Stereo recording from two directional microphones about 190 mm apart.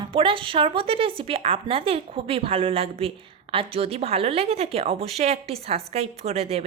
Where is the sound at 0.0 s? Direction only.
30° right (ahead or behind).